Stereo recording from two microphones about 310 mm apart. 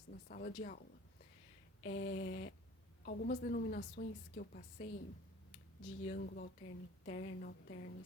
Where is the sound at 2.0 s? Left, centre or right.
Left.